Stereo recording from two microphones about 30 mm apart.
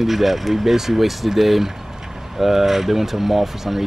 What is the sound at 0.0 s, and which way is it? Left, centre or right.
Speech, centre.